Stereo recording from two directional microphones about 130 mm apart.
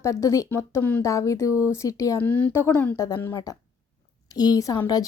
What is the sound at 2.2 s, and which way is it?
Speech, 15° left (ahead or behind).